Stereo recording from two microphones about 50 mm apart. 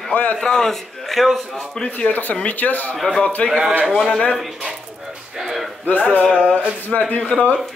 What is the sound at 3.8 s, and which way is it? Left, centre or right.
Speech, centre.